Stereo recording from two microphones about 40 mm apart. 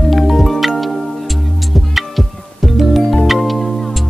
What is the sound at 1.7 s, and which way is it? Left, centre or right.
Music, centre.